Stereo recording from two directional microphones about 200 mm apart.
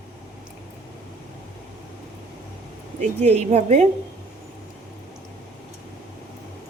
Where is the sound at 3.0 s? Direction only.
35° right (ahead or behind).